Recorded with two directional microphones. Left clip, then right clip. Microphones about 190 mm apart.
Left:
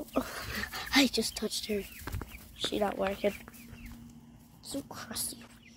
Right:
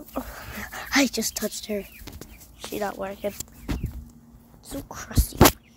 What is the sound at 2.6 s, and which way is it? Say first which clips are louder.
Speech: right 1 dB; 10° left (ahead or behind).